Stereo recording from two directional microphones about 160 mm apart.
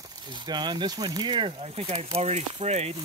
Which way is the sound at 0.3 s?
30° right (ahead or behind).